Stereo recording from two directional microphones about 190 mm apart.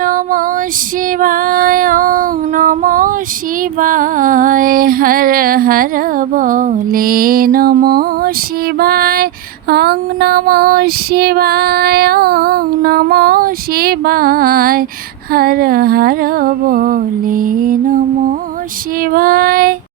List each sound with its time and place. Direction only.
0.0 s female singing: 45° right (ahead or behind)
19.1 s female singing: 50° right (ahead or behind)